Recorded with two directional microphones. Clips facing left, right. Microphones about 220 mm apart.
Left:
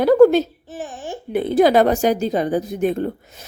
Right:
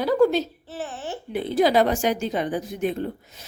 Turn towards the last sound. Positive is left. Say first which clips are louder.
# left 5 dB
turn(degrees=50)  # may be behind; listen again after turning